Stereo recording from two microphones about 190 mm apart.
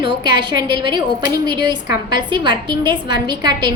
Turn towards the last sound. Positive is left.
turn(degrees=-25)  # may be behind; listen again after turning